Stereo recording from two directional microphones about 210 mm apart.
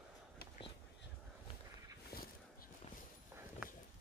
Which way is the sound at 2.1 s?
45° left (ahead or behind).